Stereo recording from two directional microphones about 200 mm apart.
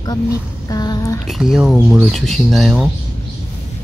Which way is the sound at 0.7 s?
20° left (ahead or behind).